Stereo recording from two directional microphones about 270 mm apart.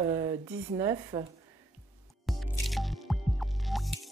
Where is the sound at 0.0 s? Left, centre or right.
Centre.